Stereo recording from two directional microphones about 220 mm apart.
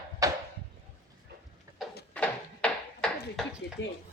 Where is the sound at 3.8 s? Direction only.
55° left (ahead or behind).